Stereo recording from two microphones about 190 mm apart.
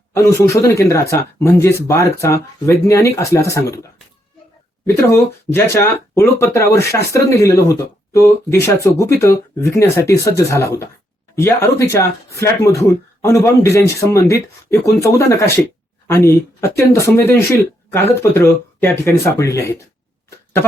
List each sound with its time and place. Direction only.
0.1 s speech: 15° left (ahead or behind)
5.1 s speech: 10° left (ahead or behind)